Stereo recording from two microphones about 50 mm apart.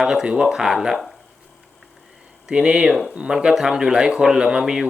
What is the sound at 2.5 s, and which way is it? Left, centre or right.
Speech, centre.